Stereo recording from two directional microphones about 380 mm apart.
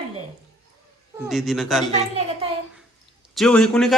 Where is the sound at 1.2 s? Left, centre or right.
Centre.